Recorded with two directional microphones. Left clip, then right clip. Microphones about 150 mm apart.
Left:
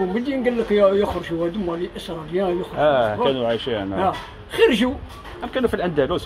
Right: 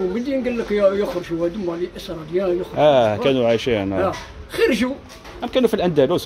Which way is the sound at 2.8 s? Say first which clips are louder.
Right 3 dB; 85° right.